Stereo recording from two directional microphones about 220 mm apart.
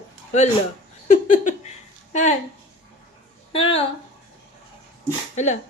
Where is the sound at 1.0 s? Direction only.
35° left (ahead or behind).